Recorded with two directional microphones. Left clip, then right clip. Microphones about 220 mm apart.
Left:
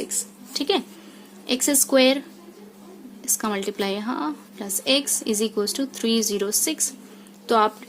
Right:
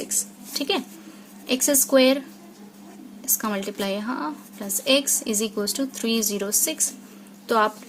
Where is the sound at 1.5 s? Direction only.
15° left (ahead or behind).